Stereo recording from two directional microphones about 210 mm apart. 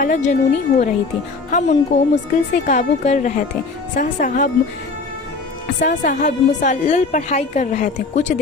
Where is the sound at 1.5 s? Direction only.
35° left (ahead or behind).